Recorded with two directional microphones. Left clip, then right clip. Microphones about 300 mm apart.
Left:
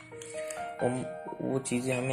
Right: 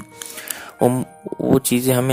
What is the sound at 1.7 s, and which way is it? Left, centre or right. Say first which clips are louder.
Speech: right 13 dB; right.